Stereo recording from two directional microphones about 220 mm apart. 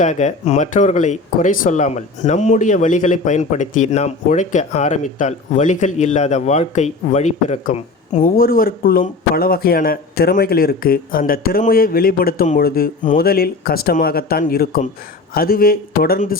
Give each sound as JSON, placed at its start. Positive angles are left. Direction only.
{"t": 0.0, "sound": "a man's voice", "side_deg": 35}